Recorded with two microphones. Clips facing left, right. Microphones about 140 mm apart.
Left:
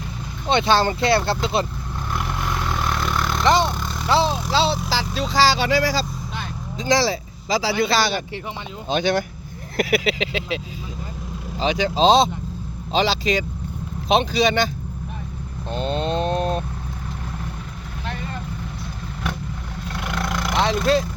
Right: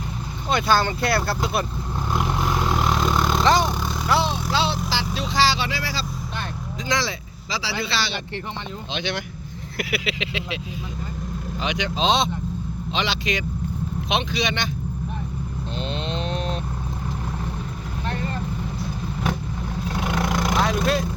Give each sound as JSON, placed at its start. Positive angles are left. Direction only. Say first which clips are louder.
{"t": 0.4, "sound": "speech", "louder": "left 3 dB", "side_deg": 25}
{"t": 2.1, "sound": "vehicle", "louder": "right 3 dB", "side_deg": -15}
{"t": 3.4, "sound": "speech", "louder": "left 2 dB", "side_deg": 20}
{"t": 3.7, "sound": "vehicle", "louder": "right 1 dB", "side_deg": -10}
{"t": 4.1, "sound": "speech", "louder": "left 3 dB", "side_deg": 30}
{"t": 11.6, "sound": "speech", "louder": "left 6 dB", "side_deg": 35}
{"t": 15.7, "sound": "a sound", "louder": "left 7 dB", "side_deg": 45}
{"t": 20.1, "sound": "vehicle", "louder": "right 2 dB", "side_deg": -15}
{"t": 20.6, "sound": "speech", "louder": "left 5 dB", "side_deg": 30}